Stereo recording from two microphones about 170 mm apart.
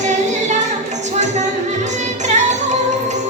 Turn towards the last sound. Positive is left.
turn(degrees=-45)  # may be behind; listen again after turning